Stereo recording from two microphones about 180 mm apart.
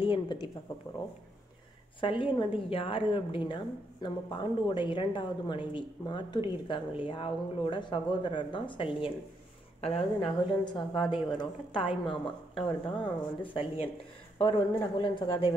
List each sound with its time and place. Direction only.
0.0 s a woman's voice: 25° left (ahead or behind)
2.0 s a woman's voice: 30° left (ahead or behind)